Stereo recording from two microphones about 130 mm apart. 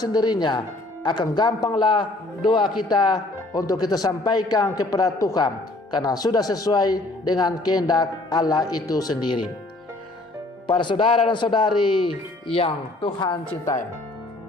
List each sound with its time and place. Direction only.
0.0 s a man's voice: 30° left (ahead or behind)
10.7 s a man's voice: 40° left (ahead or behind)
13.0 s a man's voice: 35° left (ahead or behind)